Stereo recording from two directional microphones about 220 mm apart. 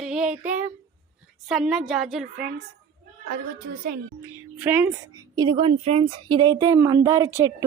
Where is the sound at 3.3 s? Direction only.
40° right (ahead or behind).